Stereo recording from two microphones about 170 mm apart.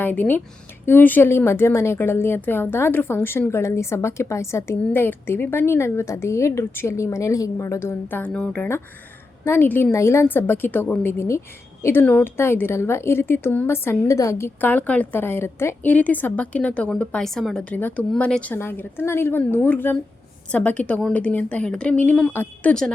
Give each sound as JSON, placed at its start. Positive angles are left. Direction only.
{"t": 0.0, "sound": "a woman's voice", "side_deg": 10}